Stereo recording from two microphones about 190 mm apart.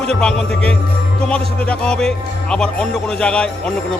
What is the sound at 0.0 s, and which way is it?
Speech, 5° left (ahead or behind).